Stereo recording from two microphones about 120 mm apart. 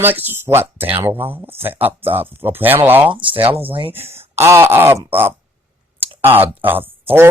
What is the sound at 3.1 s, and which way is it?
Speech, 45° right (ahead or behind).